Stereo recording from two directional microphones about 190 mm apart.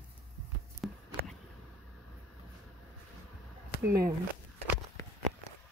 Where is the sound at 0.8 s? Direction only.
Centre (ahead or behind).